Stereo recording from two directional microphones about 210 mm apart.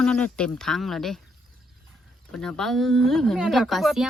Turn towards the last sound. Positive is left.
turn(degrees=0)  # may be behind; listen again after turning